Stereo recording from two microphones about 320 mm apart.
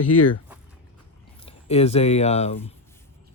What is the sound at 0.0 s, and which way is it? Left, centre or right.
Speech, left.